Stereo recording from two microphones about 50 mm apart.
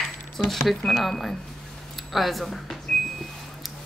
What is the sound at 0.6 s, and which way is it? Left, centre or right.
Speech, centre.